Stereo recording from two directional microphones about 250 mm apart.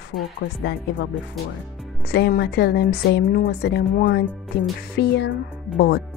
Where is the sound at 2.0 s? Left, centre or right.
Left.